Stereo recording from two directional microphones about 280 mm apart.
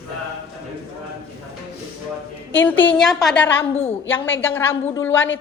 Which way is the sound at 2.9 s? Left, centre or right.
Centre.